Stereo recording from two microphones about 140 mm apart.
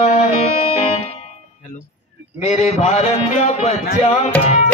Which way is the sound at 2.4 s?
50° left (ahead or behind).